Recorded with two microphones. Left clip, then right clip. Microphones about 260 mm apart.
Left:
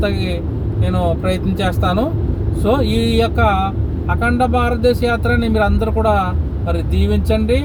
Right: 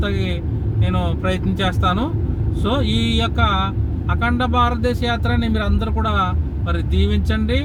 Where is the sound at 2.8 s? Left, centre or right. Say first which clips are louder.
Left 3 dB; centre.